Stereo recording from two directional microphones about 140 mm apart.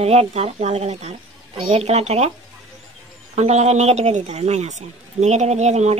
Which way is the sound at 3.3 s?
50° right (ahead or behind).